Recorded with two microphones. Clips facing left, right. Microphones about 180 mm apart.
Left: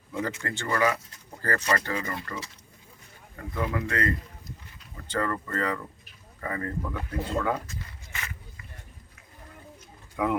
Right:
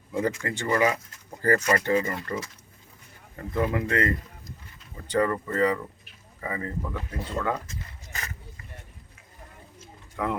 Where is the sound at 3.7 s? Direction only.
25° right (ahead or behind); by 7.0 s 5° right (ahead or behind).